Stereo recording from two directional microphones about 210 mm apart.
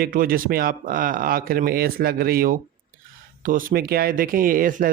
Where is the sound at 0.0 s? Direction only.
45° right (ahead or behind).